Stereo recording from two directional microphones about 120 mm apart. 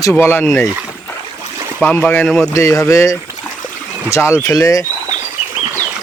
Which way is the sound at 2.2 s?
Centre (ahead or behind).